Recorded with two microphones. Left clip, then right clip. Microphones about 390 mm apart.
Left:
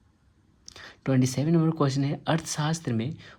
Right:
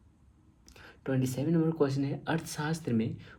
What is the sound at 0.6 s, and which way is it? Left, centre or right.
Speech, left.